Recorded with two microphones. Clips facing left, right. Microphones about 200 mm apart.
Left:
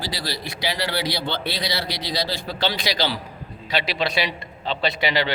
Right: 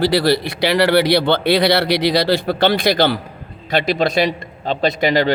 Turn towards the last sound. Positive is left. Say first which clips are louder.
# right 7 dB
turn(degrees=-45)  # may be behind; listen again after turning